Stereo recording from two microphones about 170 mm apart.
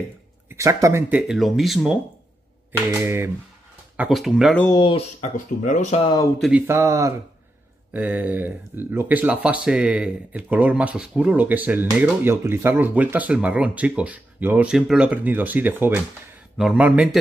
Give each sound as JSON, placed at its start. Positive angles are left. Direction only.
{"t": 0.5, "sound": "speech", "side_deg": -20}
{"t": 2.9, "sound": "speech", "side_deg": -15}
{"t": 4.7, "sound": "speech", "side_deg": 30}
{"t": 5.2, "sound": "speech", "side_deg": 45}
{"t": 6.7, "sound": "speech", "side_deg": -20}